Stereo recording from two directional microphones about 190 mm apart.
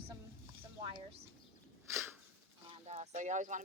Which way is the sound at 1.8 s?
15° right (ahead or behind).